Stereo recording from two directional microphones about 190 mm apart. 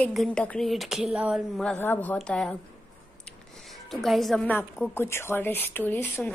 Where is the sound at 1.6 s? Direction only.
10° left (ahead or behind).